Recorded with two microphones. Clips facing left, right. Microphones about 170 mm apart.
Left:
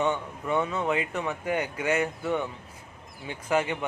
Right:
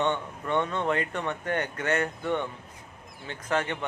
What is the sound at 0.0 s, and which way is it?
A man's voice, 5° left (ahead or behind).